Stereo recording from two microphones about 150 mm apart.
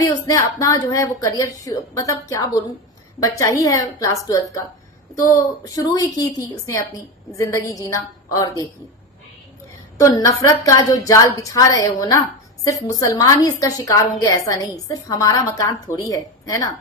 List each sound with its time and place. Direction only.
0.1 s a woman's voice: 20° left (ahead or behind)
10.0 s a woman's voice: 20° left (ahead or behind)